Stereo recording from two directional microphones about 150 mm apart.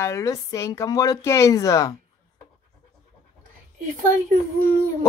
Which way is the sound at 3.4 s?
70° right (ahead or behind).